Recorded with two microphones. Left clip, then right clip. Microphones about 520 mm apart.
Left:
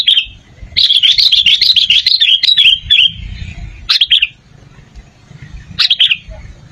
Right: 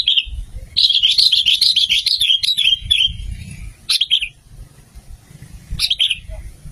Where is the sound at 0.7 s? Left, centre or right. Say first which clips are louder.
Left 5 dB; right.